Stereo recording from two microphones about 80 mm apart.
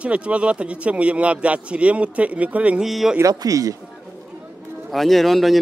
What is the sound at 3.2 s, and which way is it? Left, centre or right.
Speech, right.